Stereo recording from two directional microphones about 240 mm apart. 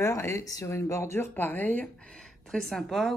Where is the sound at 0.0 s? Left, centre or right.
Centre.